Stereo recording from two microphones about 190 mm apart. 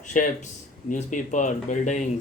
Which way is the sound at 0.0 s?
40° left (ahead or behind).